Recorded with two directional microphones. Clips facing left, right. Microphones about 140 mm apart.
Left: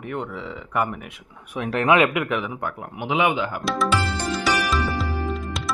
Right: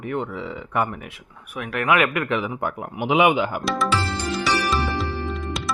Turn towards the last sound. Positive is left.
turn(degrees=0)  # may be behind; listen again after turning